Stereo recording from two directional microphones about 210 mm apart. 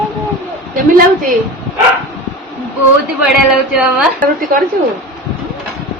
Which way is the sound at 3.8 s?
5° right (ahead or behind).